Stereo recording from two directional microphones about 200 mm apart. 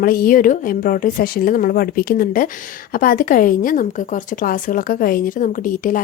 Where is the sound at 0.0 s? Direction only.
45° left (ahead or behind).